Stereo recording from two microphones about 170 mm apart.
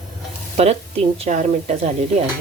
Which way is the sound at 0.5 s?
40° right (ahead or behind).